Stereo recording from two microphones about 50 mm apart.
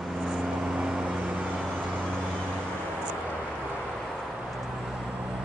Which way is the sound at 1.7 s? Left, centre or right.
Right.